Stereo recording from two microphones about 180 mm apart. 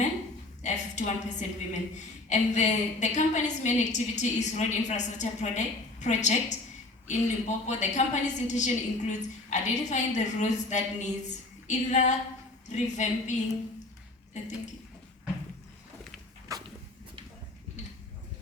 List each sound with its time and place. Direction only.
0.6 s a woman's voice: 40° left (ahead or behind)
16.5 s dog: 20° right (ahead or behind)